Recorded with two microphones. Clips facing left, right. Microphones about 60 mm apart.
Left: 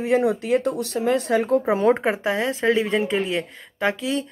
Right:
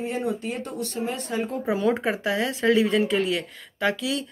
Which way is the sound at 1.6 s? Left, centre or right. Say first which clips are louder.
Left 5 dB; left.